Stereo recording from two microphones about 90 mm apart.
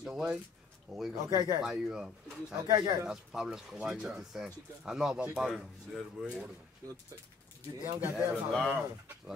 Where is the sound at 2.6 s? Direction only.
50° right (ahead or behind).